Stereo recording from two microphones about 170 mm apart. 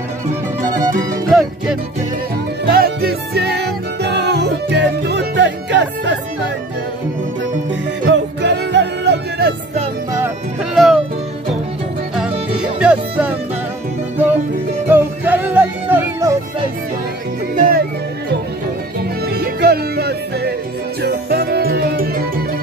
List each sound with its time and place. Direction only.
0.7 s music: 20° right (ahead or behind)
1.3 s music: centre (ahead or behind)
2.6 s music: 65° right (ahead or behind); by 6.1 s 90° right
8.1 s music: 90° right
10.7 s music: centre (ahead or behind)
12.2 s music: 5° right (ahead or behind)
14.9 s music: 10° right (ahead or behind)
17.6 s music: 55° right (ahead or behind)
19.2 s music: 70° right (ahead or behind)